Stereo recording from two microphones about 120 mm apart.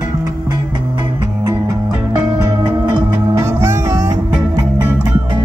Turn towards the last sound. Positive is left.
turn(degrees=-25)  # may be behind; listen again after turning